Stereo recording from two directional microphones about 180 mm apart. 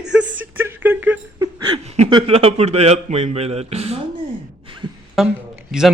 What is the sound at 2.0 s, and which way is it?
Speech, 30° right (ahead or behind).